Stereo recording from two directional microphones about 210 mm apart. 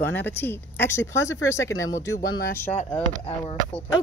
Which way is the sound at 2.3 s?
50° left (ahead or behind).